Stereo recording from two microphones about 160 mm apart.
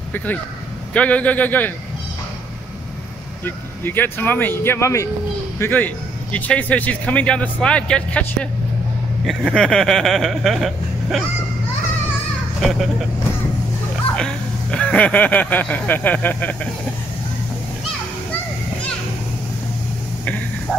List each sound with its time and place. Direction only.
0.1 s a man's voice: 10° left (ahead or behind)
3.4 s a man's voice: 10° left (ahead or behind)
12.6 s speech: centre (ahead or behind)
14.1 s speech: 5° left (ahead or behind)